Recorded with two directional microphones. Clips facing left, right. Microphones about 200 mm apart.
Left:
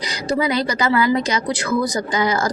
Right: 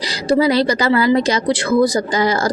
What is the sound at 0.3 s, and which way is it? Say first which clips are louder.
Speech: right 6 dB; 35° right (ahead or behind).